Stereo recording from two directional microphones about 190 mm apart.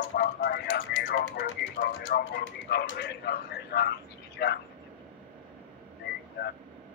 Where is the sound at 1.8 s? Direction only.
50° left (ahead or behind).